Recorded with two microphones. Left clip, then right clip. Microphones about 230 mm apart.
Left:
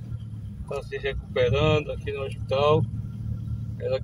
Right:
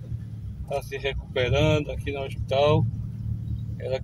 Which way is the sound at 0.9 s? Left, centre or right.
Right.